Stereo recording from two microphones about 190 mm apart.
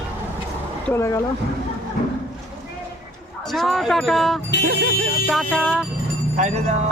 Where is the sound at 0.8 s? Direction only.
15° left (ahead or behind).